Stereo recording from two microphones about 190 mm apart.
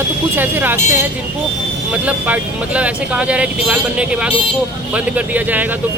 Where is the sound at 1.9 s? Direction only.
10° right (ahead or behind).